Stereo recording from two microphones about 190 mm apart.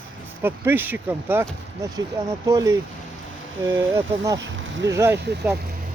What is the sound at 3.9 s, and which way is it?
Speech, 20° right (ahead or behind).